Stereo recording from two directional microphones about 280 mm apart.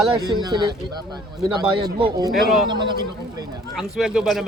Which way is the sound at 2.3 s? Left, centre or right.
Centre.